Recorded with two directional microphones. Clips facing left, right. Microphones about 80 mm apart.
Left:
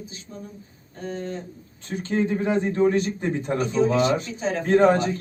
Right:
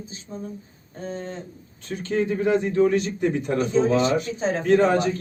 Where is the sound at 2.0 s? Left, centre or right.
Left.